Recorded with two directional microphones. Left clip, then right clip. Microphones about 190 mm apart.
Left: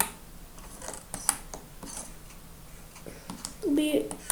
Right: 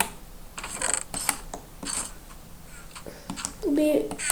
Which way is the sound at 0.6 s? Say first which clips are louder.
Right 12 dB; 45° right (ahead or behind).